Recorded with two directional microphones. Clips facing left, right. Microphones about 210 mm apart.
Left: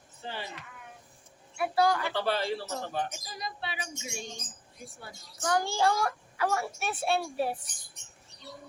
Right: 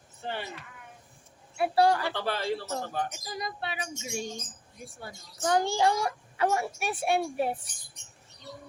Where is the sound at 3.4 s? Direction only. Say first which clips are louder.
Right 2 dB; 50° right (ahead or behind).